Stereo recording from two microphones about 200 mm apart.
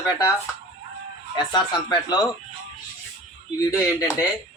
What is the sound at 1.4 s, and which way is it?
Speech, 20° left (ahead or behind).